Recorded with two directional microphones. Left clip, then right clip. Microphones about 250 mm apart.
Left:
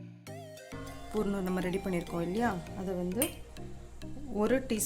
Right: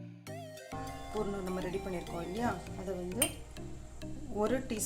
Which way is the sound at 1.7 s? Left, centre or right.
Left.